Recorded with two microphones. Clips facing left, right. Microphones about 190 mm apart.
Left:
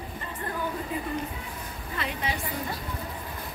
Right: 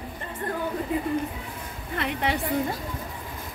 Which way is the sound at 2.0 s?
65° right (ahead or behind).